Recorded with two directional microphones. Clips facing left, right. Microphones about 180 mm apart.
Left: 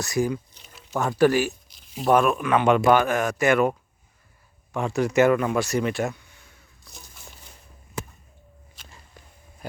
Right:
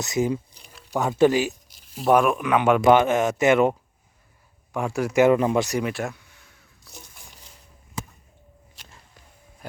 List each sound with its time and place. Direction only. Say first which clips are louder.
0.0 s speech: right 1 dB; 20° right (ahead or behind)
0.6 s a sound: even; centre (ahead or behind)
0.9 s speech: right 1 dB; 20° right (ahead or behind)
4.7 s speech: left 1 dB; 10° right (ahead or behind)
5.3 s speech: right 2 dB; 25° right (ahead or behind)
5.6 s speech: left 1 dB; 15° right (ahead or behind)
5.9 s a sound: left 3 dB; centre (ahead or behind)